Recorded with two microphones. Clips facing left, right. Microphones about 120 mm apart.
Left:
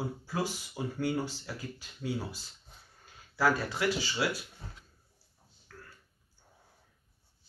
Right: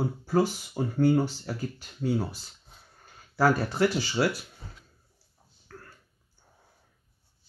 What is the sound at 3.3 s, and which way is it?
Speech, 45° right (ahead or behind).